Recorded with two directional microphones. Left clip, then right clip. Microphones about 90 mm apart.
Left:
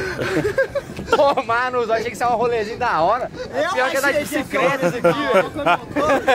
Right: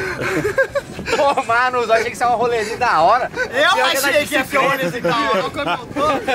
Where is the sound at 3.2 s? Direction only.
20° left (ahead or behind).